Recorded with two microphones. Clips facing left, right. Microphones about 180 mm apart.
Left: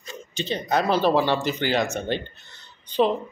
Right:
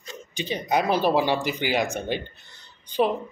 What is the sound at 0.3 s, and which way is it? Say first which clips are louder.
Speech: left 1 dB; 10° right (ahead or behind).